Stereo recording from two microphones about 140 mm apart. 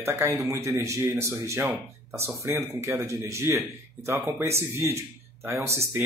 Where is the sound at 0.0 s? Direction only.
20° right (ahead or behind).